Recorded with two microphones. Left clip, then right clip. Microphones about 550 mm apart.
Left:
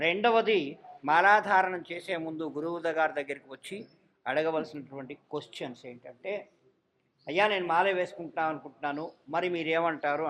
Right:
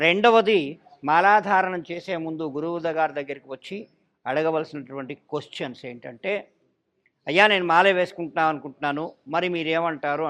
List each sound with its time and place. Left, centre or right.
0.0 s a man's voice: right